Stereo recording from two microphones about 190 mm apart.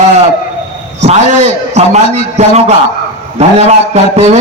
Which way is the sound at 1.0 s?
35° right (ahead or behind).